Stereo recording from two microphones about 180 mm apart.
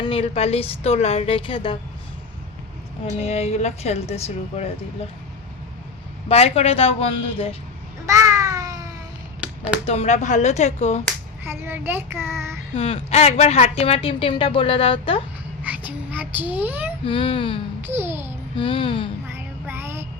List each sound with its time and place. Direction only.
0.0 s speech: 30° left (ahead or behind)
3.2 s speech: 35° left (ahead or behind)
6.2 s speech: 35° left (ahead or behind)
8.0 s babbling: 15° right (ahead or behind)
9.4 s a sound: 5° right (ahead or behind)
9.8 s speech: 35° left (ahead or behind)
11.4 s child singing: 10° right (ahead or behind)
12.7 s speech: 35° left (ahead or behind)
15.6 s a child's voice: 10° right (ahead or behind)
17.0 s speech: 30° left (ahead or behind)
17.8 s a child's voice: 15° right (ahead or behind)
18.5 s speech: 30° left (ahead or behind)
19.3 s child singing: 15° right (ahead or behind)